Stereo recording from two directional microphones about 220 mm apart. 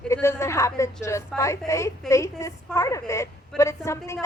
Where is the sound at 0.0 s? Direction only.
10° left (ahead or behind).